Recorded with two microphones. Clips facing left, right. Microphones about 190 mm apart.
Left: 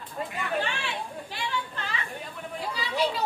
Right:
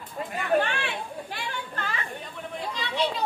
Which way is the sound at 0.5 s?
55° right (ahead or behind).